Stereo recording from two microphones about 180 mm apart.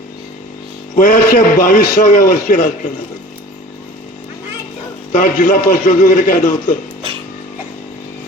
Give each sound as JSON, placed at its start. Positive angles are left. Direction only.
{"t": 0.9, "sound": "a man's voice", "side_deg": 50}
{"t": 5.1, "sound": "a man's voice", "side_deg": 45}